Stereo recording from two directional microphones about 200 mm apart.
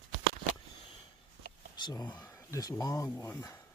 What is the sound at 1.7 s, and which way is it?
Speech, 20° left (ahead or behind).